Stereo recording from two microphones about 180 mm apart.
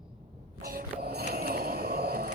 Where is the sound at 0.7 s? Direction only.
55° right (ahead or behind).